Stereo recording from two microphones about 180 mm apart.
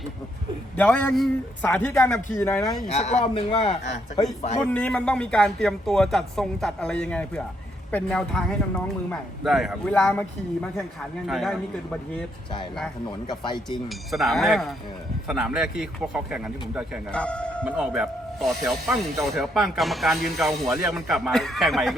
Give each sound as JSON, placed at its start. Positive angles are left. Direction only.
{"t": 0.8, "sound": "a man's voice", "side_deg": 10}
{"t": 2.8, "sound": "speech", "side_deg": 40}
{"t": 4.6, "sound": "speech", "side_deg": 10}
{"t": 13.1, "sound": "speech", "side_deg": 25}
{"t": 13.7, "sound": "speech", "side_deg": 0}
{"t": 17.1, "sound": "speech", "side_deg": 5}